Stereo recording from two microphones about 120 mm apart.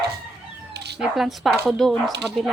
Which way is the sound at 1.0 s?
Centre (ahead or behind).